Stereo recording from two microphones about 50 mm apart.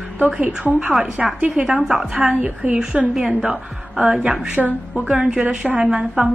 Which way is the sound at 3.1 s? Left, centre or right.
Centre.